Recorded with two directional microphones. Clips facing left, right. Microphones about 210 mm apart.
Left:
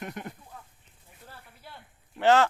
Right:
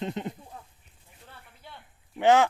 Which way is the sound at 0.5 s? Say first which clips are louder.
Right 2 dB; 30° right (ahead or behind).